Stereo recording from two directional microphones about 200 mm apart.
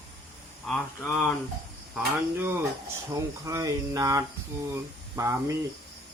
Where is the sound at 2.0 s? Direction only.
10° right (ahead or behind).